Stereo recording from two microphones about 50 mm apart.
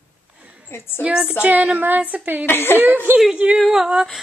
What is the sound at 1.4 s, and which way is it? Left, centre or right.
Female singing, right.